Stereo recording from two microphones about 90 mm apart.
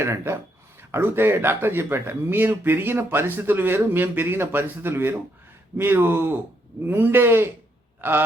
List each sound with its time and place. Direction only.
0.0 s speech: 30° right (ahead or behind)